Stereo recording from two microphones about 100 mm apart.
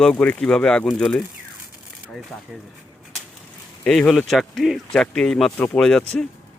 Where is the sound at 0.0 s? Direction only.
10° left (ahead or behind).